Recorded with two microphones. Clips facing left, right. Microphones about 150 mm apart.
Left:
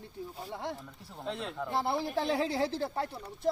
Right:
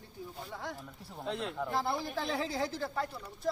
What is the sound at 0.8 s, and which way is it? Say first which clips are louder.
Speech: right 1 dB; 5° right (ahead or behind).